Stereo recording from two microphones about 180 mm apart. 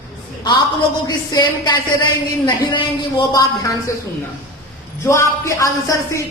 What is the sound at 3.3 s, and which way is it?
Speech, 20° left (ahead or behind).